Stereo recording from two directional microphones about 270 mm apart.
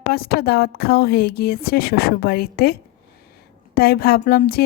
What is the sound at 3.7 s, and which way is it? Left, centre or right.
Speech, left.